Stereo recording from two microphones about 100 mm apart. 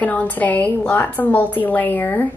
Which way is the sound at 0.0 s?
15° left (ahead or behind).